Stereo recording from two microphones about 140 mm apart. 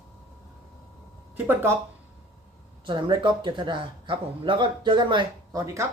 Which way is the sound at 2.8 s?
35° right (ahead or behind).